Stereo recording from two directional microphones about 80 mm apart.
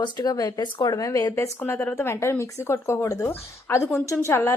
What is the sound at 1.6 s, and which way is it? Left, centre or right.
Speech, left.